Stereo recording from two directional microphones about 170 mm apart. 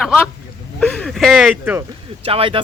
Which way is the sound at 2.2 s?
35° right (ahead or behind).